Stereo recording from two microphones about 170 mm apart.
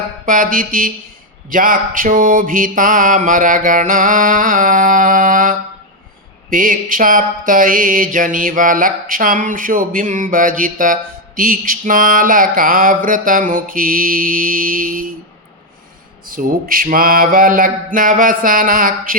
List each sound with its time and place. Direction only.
0.3 s mantra: 55° right (ahead or behind)
16.2 s mantra: 55° right (ahead or behind)